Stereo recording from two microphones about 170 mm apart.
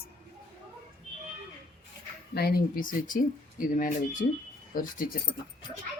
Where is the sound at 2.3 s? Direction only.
65° left (ahead or behind).